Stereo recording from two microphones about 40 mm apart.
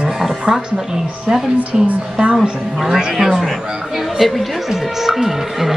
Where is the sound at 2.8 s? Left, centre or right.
Centre.